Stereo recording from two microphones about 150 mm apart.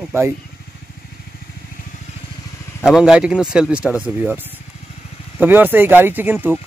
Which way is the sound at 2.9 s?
5° right (ahead or behind).